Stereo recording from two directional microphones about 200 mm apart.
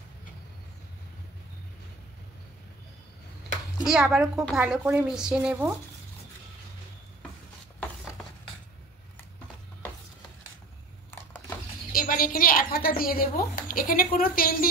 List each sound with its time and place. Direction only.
3.8 s a woman's voice: centre (ahead or behind)
11.1 s a sound: 10° left (ahead or behind)
11.9 s a woman's voice: 45° left (ahead or behind)